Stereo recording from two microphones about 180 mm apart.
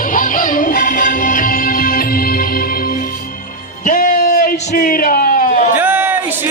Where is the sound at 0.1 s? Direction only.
50° left (ahead or behind).